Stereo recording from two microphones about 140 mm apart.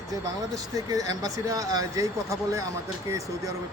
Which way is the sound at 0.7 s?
25° right (ahead or behind).